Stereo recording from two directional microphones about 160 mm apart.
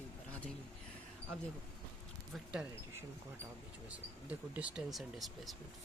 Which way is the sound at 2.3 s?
5° right (ahead or behind).